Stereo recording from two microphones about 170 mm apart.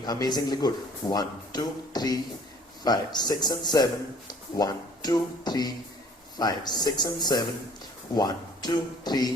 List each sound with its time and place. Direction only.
0.0 s speech: 25° left (ahead or behind)